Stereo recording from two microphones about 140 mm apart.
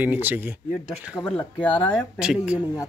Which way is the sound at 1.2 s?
15° left (ahead or behind).